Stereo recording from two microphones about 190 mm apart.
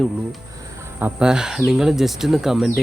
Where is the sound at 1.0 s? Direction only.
5° right (ahead or behind).